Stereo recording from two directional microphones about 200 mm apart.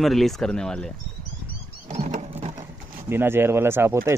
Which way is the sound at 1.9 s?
35° right (ahead or behind).